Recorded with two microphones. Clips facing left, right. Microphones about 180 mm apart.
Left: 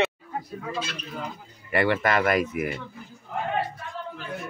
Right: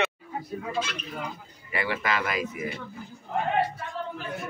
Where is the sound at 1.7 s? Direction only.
60° left (ahead or behind).